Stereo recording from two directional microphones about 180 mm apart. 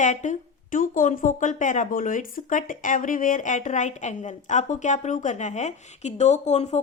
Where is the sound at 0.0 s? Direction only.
40° left (ahead or behind).